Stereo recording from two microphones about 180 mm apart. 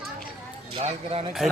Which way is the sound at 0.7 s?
35° right (ahead or behind).